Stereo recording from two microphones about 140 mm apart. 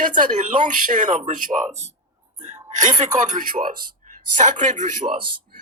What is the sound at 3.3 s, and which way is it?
Speech, 75° right (ahead or behind).